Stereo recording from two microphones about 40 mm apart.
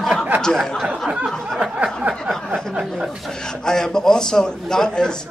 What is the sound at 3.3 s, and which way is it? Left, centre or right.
A man's voice, centre.